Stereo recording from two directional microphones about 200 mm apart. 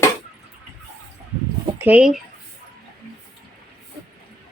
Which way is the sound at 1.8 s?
5° right (ahead or behind).